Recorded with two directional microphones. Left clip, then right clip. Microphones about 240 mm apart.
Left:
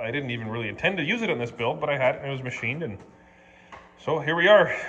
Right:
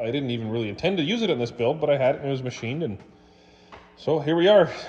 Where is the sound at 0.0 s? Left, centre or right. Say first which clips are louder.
Right 2 dB; right.